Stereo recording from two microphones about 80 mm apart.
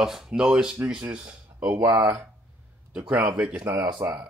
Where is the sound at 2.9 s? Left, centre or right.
Centre.